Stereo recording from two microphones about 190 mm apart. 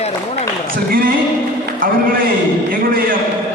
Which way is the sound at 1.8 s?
50° right (ahead or behind).